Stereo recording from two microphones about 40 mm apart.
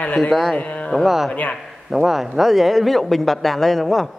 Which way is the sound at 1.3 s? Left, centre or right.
Left.